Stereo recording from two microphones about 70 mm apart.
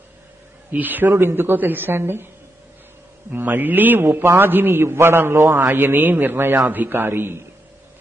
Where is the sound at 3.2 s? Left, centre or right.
Right.